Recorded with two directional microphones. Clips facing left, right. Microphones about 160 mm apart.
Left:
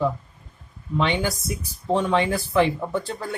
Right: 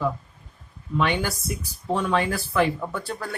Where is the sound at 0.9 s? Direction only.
20° left (ahead or behind).